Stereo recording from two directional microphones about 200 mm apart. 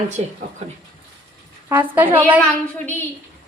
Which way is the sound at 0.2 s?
30° right (ahead or behind).